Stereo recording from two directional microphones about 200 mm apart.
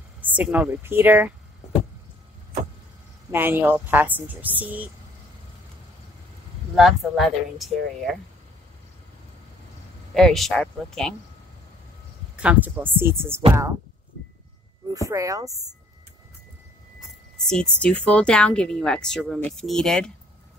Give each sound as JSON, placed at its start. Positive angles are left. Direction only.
{"t": 0.2, "sound": "speech", "side_deg": -10}
{"t": 3.3, "sound": "speech", "side_deg": -10}
{"t": 6.7, "sound": "speech", "side_deg": 0}
{"t": 10.1, "sound": "speech", "side_deg": 0}
{"t": 12.4, "sound": "speech", "side_deg": -5}
{"t": 15.0, "sound": "speech", "side_deg": -15}
{"t": 17.4, "sound": "speech", "side_deg": 5}